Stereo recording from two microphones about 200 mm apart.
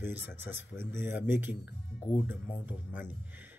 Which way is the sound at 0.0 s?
65° left (ahead or behind).